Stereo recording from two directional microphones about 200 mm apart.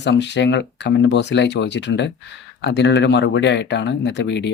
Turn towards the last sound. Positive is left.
turn(degrees=60)  # may be behind; listen again after turning